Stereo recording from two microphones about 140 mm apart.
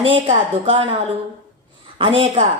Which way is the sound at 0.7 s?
40° right (ahead or behind).